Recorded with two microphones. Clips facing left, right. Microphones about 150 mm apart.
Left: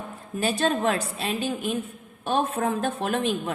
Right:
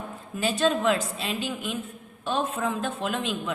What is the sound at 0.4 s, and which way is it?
A woman's voice, 45° left (ahead or behind).